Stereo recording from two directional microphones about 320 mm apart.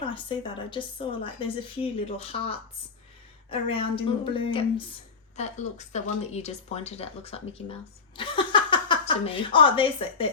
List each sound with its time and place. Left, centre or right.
0.1 s speech: centre